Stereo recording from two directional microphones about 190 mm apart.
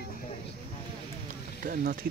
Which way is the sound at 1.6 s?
45° right (ahead or behind).